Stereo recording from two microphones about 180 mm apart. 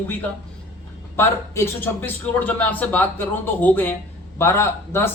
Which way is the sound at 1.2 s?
15° left (ahead or behind).